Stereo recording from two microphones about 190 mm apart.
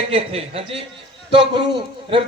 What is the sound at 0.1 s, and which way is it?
A man's voice, 30° right (ahead or behind).